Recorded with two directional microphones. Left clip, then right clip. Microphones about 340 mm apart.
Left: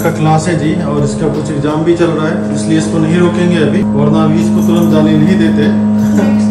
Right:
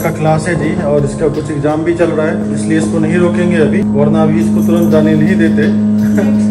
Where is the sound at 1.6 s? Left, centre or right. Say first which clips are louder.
Left 1 dB; centre.